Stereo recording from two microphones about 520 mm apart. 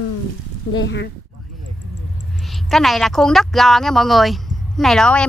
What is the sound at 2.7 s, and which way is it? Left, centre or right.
Speech, centre.